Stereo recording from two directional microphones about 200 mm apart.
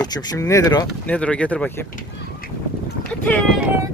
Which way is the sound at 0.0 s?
20° left (ahead or behind).